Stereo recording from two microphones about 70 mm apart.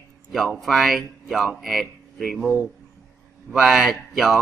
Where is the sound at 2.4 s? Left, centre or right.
Left.